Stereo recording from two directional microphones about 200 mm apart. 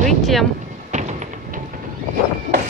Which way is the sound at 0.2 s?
Centre (ahead or behind).